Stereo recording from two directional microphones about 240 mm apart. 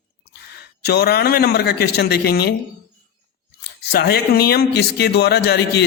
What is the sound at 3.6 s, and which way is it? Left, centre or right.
Speech, left.